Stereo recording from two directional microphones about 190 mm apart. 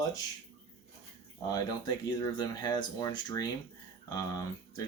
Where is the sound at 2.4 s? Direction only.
20° left (ahead or behind).